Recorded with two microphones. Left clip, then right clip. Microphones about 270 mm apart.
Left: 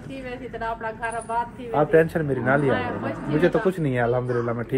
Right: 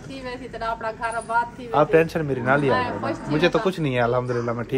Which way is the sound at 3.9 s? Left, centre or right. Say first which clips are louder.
Right 4 dB; centre.